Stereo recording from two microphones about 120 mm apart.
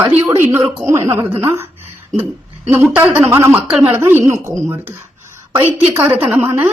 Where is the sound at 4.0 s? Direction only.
20° right (ahead or behind).